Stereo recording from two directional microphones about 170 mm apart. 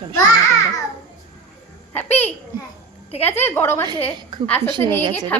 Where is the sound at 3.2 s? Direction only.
10° left (ahead or behind).